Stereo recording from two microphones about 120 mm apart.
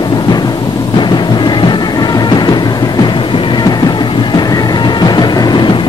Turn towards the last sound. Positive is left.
turn(degrees=40)  # may be behind; listen again after turning